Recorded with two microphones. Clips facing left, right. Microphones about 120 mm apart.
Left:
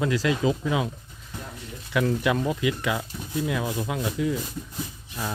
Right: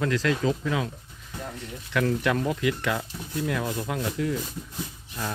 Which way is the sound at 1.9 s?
5° left (ahead or behind).